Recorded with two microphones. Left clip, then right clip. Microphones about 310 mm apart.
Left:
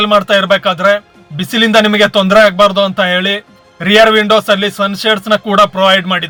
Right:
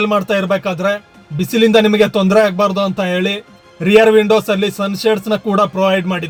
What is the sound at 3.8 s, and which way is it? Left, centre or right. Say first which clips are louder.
A man's voice: left 2 dB; centre.